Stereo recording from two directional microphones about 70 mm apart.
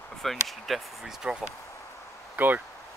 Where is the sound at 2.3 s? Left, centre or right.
Right.